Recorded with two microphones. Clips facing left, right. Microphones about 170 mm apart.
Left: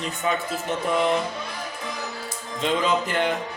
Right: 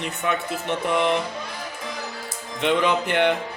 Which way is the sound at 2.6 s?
65° right (ahead or behind).